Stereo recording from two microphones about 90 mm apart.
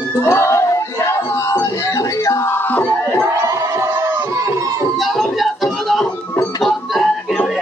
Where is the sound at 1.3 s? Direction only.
30° left (ahead or behind).